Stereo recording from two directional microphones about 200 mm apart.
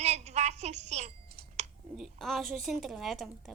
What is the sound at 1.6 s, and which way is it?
Clicking, 35° right (ahead or behind).